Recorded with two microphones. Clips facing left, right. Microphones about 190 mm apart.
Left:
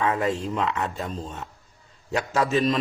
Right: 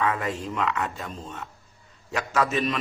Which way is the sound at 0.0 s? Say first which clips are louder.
Left 3 dB; 30° left (ahead or behind).